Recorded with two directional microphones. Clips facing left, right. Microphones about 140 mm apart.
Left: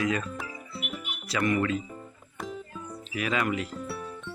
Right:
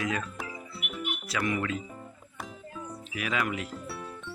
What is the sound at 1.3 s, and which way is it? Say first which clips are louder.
Speech: left 5 dB; 5° right (ahead or behind).